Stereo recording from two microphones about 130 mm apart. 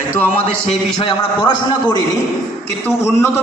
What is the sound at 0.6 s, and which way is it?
Speech, 45° left (ahead or behind).